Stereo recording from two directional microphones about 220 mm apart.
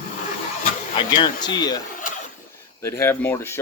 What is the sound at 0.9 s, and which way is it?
Speech, 20° left (ahead or behind).